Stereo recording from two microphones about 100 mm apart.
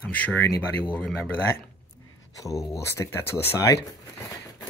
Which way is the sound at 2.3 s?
35° left (ahead or behind).